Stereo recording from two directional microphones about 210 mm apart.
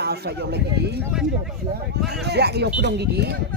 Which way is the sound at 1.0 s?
5° right (ahead or behind).